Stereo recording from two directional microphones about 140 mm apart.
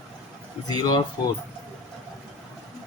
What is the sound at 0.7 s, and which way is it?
Speech, 30° left (ahead or behind).